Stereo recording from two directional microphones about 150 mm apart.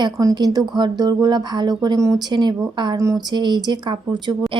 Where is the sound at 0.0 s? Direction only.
25° right (ahead or behind).